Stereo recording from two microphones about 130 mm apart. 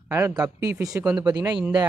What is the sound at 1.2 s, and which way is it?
Speech, 30° right (ahead or behind).